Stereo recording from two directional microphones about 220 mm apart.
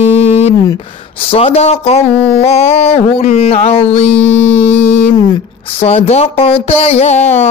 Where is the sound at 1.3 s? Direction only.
25° left (ahead or behind).